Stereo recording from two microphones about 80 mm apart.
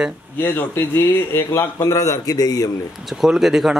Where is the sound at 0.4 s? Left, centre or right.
Left.